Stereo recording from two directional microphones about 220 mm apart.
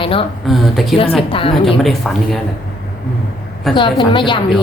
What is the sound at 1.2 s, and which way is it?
Speech, 25° left (ahead or behind).